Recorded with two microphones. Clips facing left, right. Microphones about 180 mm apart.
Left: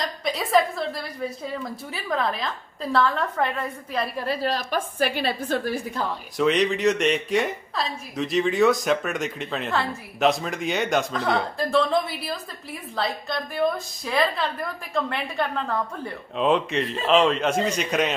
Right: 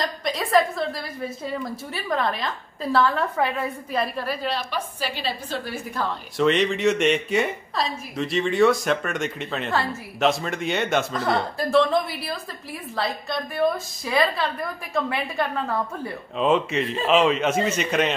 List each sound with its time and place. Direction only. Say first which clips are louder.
0.0 s a woman's voice: right 1 dB; centre (ahead or behind)
4.3 s a woman's voice: left 2 dB; 40° left (ahead or behind)
6.3 s a woman's voice: right 1 dB; centre (ahead or behind)